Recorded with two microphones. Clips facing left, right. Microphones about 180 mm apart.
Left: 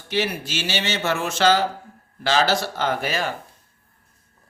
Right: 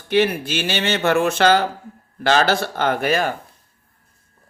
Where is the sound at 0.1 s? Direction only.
55° right (ahead or behind).